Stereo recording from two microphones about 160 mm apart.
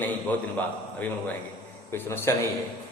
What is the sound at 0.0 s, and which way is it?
A man's voice, 10° left (ahead or behind).